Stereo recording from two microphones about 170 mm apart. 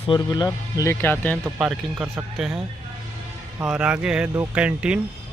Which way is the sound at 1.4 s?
5° right (ahead or behind).